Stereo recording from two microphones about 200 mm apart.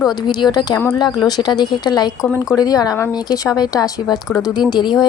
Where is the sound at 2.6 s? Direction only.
20° left (ahead or behind).